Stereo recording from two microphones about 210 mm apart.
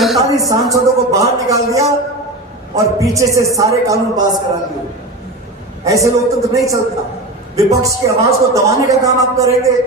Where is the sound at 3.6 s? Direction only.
15° right (ahead or behind).